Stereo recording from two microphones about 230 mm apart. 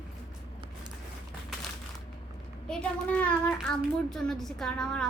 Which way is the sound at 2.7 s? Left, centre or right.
Centre.